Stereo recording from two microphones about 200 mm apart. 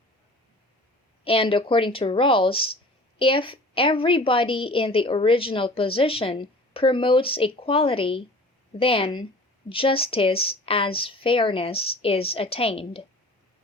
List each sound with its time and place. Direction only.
1.2 s a woman's voice: 25° left (ahead or behind)